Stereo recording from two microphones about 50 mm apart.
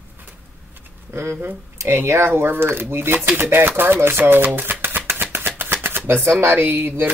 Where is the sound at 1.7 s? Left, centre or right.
Right.